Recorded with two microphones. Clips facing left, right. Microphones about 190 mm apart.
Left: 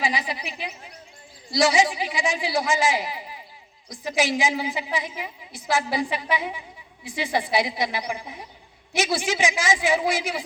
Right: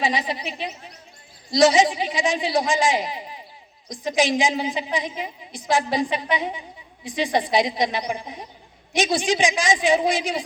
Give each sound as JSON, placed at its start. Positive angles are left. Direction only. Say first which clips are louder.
{"t": 0.0, "sound": "a woman's voice", "louder": "right 3 dB", "side_deg": -20}